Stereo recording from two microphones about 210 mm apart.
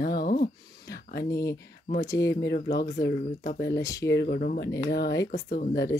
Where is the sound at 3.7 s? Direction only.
15° left (ahead or behind).